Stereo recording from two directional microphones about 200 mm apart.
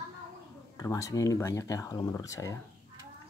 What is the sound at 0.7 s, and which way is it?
Speech, 15° left (ahead or behind).